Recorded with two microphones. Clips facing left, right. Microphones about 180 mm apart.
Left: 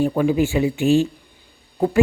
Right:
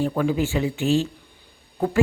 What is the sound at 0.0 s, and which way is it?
Speech, 15° left (ahead or behind).